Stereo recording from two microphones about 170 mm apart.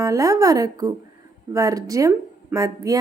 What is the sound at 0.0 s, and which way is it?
A woman's voice, 20° right (ahead or behind).